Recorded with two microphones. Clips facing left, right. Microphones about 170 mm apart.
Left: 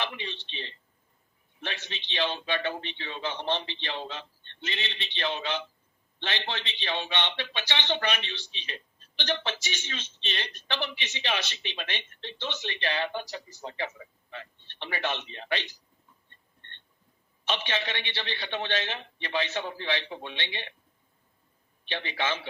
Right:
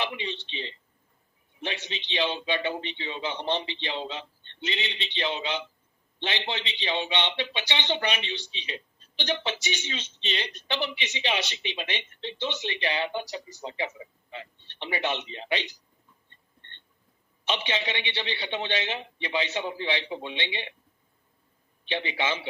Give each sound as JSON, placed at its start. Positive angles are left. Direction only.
{"t": 0.0, "sound": "a man's voice", "side_deg": -15}
{"t": 16.3, "sound": "a sound", "side_deg": -15}
{"t": 17.4, "sound": "a man's voice", "side_deg": -15}
{"t": 21.8, "sound": "a man's voice", "side_deg": -15}